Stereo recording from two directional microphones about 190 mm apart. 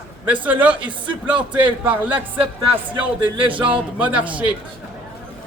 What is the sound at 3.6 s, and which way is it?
Speech, 25° right (ahead or behind).